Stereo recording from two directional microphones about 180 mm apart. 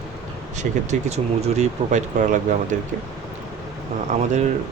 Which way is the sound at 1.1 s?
40° right (ahead or behind).